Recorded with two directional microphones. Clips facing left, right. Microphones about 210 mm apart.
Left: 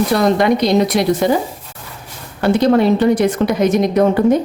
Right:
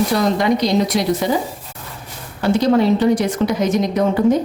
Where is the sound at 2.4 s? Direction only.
60° left (ahead or behind).